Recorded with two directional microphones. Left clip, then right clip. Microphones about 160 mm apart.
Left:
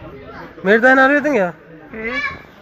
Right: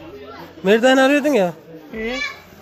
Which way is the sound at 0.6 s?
25° right (ahead or behind).